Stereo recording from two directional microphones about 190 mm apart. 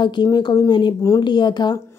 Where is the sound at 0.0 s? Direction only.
20° left (ahead or behind).